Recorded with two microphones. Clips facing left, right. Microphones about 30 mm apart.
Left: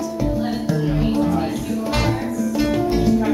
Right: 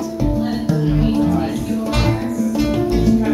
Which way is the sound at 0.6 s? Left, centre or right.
Centre.